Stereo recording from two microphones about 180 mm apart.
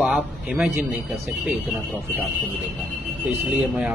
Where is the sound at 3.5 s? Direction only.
5° right (ahead or behind).